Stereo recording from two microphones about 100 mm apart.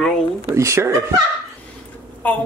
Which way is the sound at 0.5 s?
30° right (ahead or behind).